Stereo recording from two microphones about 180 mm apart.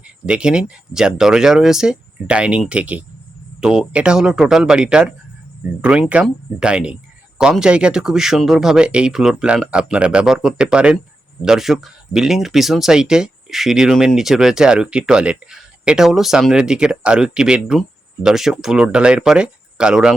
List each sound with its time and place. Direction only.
0.3 s speech: 5° right (ahead or behind)